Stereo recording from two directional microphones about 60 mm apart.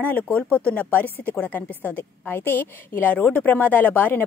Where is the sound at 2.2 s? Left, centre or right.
Left.